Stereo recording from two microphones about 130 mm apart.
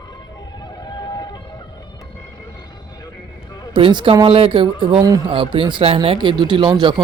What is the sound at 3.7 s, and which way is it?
Speech, 40° right (ahead or behind).